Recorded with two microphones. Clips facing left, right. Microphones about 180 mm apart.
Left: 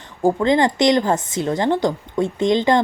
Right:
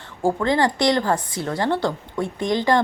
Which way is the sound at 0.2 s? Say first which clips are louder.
Left 3 dB; 20° left (ahead or behind).